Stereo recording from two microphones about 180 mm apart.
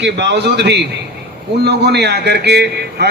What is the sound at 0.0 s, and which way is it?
A man's voice, 70° right (ahead or behind).